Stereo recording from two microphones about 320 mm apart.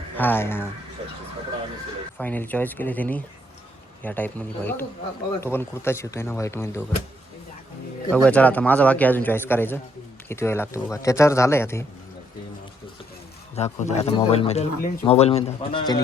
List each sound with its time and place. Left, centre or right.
0.2 s speech: centre
2.1 s a man's voice: centre
8.1 s a man's voice: centre
13.6 s speech: left